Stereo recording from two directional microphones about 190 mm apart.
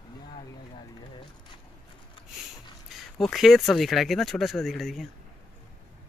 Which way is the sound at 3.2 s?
Centre (ahead or behind).